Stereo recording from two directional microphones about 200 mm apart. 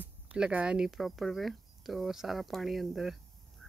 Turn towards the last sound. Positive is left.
turn(degrees=0)  # may be behind; listen again after turning